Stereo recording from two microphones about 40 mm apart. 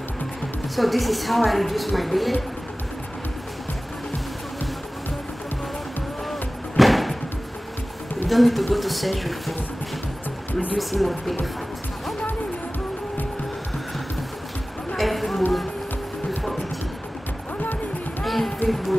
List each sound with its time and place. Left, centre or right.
0.7 s a woman's voice: centre
6.8 s music: centre
8.3 s a woman's voice: centre
10.8 s a woman's voice: centre
15.0 s a sound: centre
18.2 s run: centre
18.7 s a woman's voice: centre